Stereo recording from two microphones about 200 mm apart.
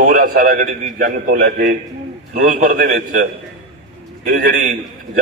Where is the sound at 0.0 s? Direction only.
45° right (ahead or behind).